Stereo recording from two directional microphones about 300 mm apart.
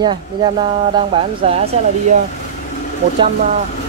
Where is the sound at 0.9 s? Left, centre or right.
Centre.